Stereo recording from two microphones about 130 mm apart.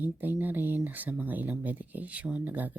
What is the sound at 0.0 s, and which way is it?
Speech, 15° right (ahead or behind).